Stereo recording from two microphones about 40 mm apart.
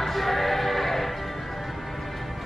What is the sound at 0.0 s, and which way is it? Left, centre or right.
Music, centre.